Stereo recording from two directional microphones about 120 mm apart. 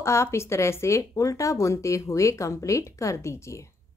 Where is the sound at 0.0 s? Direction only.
25° left (ahead or behind).